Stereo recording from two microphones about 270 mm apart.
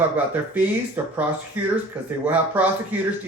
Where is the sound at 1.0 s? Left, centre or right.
Centre.